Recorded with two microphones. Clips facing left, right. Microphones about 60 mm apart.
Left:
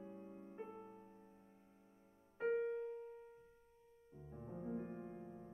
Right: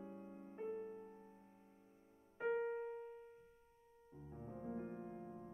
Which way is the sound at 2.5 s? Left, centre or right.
Right.